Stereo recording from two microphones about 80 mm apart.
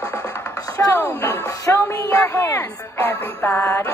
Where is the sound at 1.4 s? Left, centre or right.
Left.